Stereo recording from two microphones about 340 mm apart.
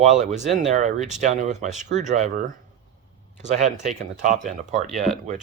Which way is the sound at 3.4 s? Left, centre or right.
Right.